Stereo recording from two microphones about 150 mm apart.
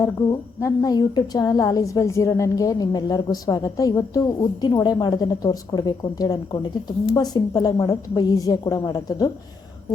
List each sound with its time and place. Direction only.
0.0 s a woman's voice: 20° left (ahead or behind)